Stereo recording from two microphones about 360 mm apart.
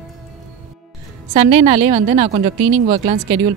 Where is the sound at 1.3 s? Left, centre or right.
Centre.